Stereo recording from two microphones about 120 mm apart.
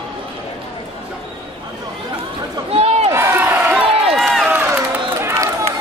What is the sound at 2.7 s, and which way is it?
Crowd, 55° right (ahead or behind).